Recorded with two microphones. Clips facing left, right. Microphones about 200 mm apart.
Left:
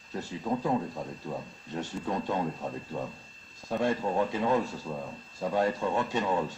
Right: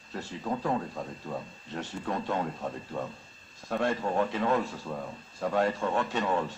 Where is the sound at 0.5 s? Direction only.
10° left (ahead or behind).